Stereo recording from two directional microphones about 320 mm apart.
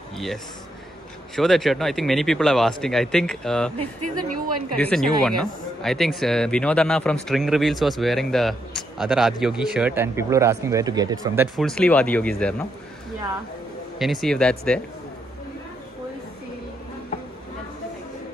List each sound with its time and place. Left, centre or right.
1.3 s speech: centre
3.7 s a woman's voice: right
4.7 s speech: centre
11.5 s speech: centre
13.9 s speech: centre